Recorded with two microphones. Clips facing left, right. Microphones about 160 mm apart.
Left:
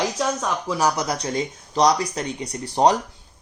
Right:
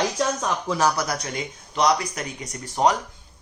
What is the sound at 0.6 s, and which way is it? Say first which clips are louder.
Speech: even; 15° left (ahead or behind).